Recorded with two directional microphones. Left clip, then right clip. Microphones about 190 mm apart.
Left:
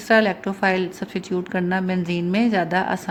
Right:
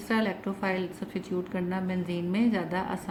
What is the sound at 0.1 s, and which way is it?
A woman's voice, 50° left (ahead or behind).